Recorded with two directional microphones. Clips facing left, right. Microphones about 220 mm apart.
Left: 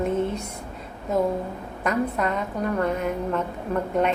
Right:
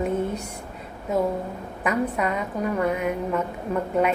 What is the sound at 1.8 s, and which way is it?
A woman's voice, 10° right (ahead or behind).